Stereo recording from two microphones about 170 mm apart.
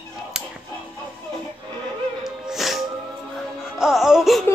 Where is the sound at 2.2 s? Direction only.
Centre (ahead or behind).